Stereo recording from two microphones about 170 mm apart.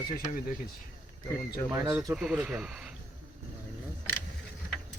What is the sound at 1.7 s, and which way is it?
Speech, 15° right (ahead or behind).